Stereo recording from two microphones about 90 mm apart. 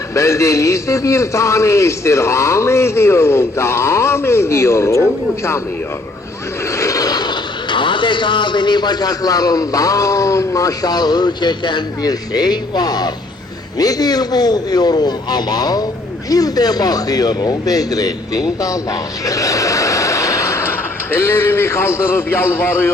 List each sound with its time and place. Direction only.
0.1 s a man's voice: 35° left (ahead or behind)
6.7 s speech: 40° left (ahead or behind)
19.2 s a sound: 40° left (ahead or behind)
21.1 s a man's voice: 25° left (ahead or behind)